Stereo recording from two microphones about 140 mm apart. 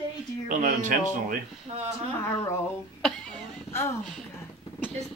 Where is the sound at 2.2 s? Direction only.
10° left (ahead or behind).